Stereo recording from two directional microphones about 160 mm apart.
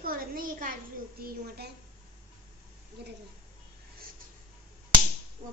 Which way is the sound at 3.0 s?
90° right.